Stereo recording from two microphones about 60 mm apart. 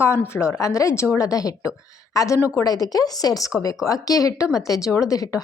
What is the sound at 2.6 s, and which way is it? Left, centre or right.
Speech, left.